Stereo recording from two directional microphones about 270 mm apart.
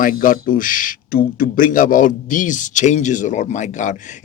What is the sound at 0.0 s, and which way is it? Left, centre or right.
Speech, left.